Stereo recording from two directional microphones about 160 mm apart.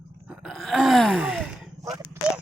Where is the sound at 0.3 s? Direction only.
5° right (ahead or behind).